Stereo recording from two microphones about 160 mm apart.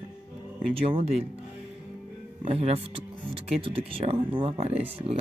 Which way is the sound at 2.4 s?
40° right (ahead or behind).